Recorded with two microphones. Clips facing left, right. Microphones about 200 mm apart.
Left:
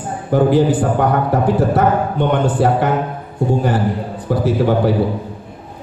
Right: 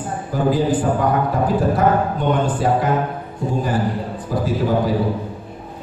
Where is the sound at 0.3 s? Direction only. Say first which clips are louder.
Left 5 dB; 70° left (ahead or behind).